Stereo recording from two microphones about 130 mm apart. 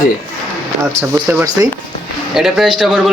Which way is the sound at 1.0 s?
25° right (ahead or behind).